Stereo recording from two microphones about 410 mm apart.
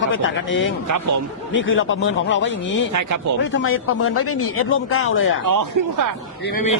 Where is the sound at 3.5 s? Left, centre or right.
Left.